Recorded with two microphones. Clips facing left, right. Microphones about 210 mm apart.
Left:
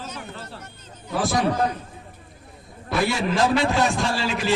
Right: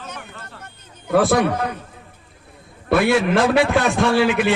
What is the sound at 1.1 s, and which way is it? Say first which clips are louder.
Speech: right 8 dB; 60° right (ahead or behind).